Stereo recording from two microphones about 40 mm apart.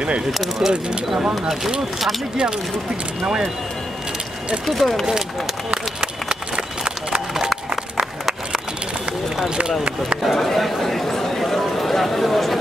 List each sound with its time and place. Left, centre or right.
0.3 s speech: centre
4.6 s speech: centre
5.9 s run: centre
7.3 s a sound: centre
9.6 s speech: right
10.2 s speech: centre